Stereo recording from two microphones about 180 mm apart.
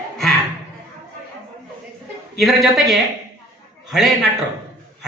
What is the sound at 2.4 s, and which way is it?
Speech, centre (ahead or behind).